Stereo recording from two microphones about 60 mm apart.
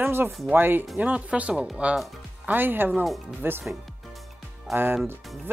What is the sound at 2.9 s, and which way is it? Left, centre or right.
Speech, centre.